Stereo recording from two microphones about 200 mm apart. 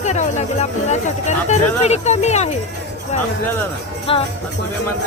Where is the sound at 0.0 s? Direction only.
35° left (ahead or behind).